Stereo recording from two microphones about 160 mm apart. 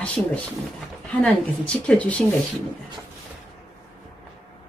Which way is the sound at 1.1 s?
5° left (ahead or behind).